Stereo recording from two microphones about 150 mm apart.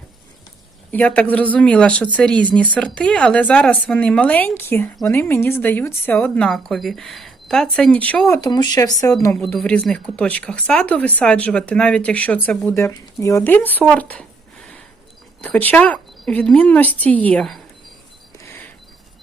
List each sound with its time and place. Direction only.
0.9 s speech: 10° left (ahead or behind)
8.3 s speech: 25° left (ahead or behind)
9.3 s speech: 5° left (ahead or behind)
18.4 s a sound: 15° left (ahead or behind)